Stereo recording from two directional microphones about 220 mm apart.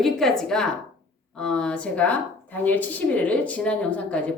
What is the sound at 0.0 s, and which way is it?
A woman's voice, centre (ahead or behind).